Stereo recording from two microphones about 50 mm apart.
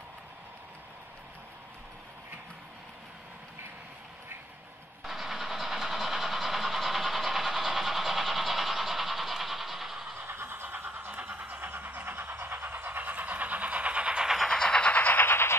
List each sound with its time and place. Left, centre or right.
5.0 s vehicle: centre
10.2 s vehicle: right
12.4 s train: right; by 14.3 s centre
14.5 s train: centre
15.2 s train: left